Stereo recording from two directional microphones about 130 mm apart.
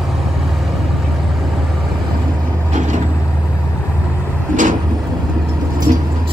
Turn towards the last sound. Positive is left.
turn(degrees=-50)  # may be behind; listen again after turning